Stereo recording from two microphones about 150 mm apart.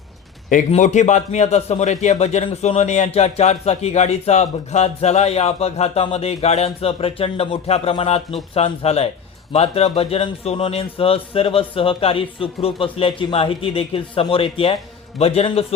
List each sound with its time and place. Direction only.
0.7 s a man's voice: 50° left (ahead or behind)